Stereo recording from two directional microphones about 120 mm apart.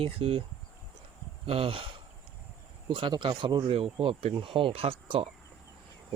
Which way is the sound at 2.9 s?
40° right (ahead or behind).